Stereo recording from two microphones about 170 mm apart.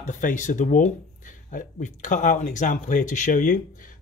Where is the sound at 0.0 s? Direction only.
45° left (ahead or behind).